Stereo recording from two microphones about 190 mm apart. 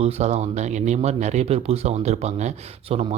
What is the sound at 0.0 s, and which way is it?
Speech, 35° right (ahead or behind).